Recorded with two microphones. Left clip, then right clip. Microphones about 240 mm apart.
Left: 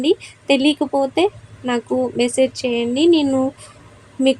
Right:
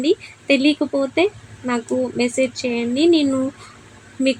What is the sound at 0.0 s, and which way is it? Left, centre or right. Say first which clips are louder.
Speech: left 1 dB; left.